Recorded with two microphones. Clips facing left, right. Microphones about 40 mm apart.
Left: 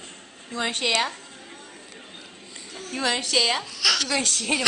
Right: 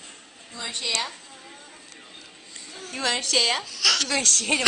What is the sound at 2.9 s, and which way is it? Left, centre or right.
Speech, centre.